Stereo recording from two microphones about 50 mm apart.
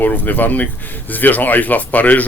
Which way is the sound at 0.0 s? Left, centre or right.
Left.